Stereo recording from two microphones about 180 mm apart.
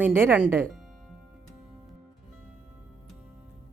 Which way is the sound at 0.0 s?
10° right (ahead or behind).